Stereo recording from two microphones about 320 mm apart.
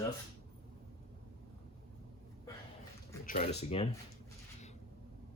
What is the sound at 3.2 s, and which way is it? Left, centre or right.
Speech, left.